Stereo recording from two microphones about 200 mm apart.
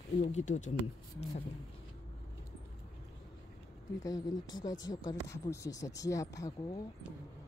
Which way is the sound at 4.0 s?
20° left (ahead or behind).